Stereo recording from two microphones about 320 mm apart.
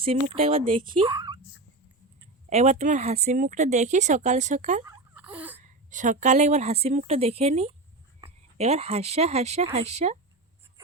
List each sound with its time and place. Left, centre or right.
0.3 s speech: centre
2.5 s speech: centre
4.9 s a sound: centre
5.6 s a woman's voice: right